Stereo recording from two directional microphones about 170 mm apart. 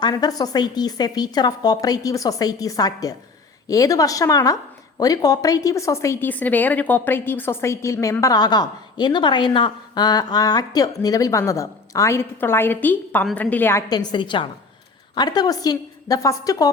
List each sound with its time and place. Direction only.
0.0 s a woman's voice: 20° left (ahead or behind)